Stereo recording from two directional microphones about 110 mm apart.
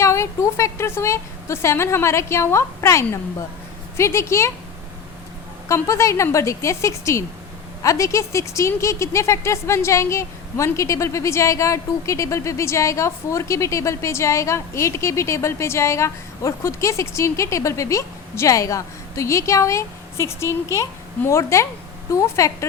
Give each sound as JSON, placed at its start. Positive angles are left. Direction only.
{"t": 0.0, "sound": "a woman's voice", "side_deg": 25}
{"t": 5.6, "sound": "a woman's voice", "side_deg": 25}